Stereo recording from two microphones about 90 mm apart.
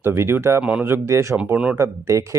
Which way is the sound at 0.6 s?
15° right (ahead or behind).